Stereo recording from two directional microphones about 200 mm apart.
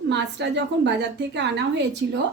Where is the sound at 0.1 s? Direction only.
60° right (ahead or behind).